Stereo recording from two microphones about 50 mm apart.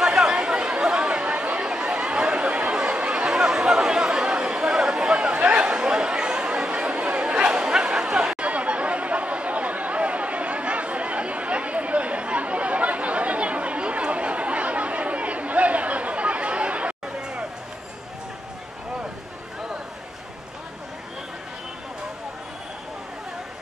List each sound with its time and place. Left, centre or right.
0.0 s chatter: centre